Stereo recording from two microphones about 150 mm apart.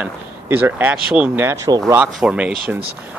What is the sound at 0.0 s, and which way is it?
Speech, 10° right (ahead or behind).